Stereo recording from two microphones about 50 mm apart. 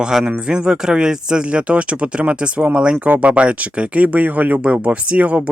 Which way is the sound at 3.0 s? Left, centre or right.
Right.